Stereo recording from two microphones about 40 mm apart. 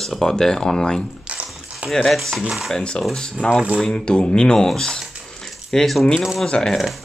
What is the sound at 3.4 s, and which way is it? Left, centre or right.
Speech, left.